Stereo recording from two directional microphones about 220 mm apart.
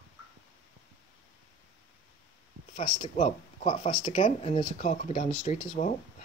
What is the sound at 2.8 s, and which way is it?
Speech, 30° left (ahead or behind).